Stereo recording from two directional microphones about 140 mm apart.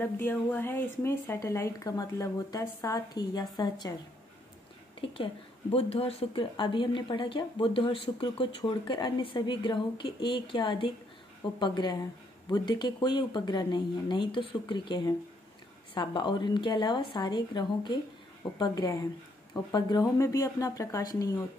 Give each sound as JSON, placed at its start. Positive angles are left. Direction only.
{"t": 0.0, "sound": "speech", "side_deg": 15}
{"t": 5.0, "sound": "speech", "side_deg": 40}
{"t": 6.5, "sound": "speech", "side_deg": 35}